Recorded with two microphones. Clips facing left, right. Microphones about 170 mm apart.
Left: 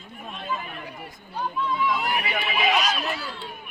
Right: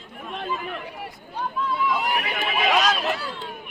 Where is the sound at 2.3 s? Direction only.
45° right (ahead or behind).